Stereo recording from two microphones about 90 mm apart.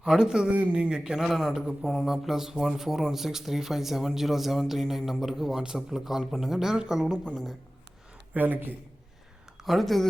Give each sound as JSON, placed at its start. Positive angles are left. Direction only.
{"t": 0.0, "sound": "a man's voice", "side_deg": -5}
{"t": 8.3, "sound": "a man's voice", "side_deg": -20}
{"t": 9.6, "sound": "a man's voice", "side_deg": 0}